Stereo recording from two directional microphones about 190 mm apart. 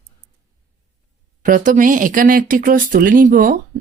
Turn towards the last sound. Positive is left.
turn(degrees=-50)  # may be behind; listen again after turning